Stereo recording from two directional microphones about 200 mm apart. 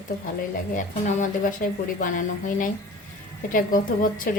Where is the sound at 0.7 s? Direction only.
40° left (ahead or behind).